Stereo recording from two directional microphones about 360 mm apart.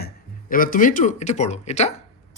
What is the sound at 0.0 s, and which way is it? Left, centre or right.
Speech, left.